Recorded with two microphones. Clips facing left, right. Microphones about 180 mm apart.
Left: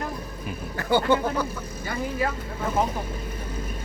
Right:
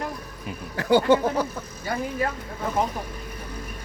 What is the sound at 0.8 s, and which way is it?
Speech, 90° right.